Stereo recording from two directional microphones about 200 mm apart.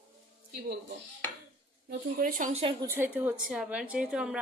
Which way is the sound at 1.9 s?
45° right (ahead or behind).